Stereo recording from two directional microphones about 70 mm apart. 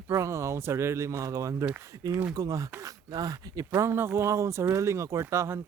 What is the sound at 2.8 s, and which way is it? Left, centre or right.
Speech, right.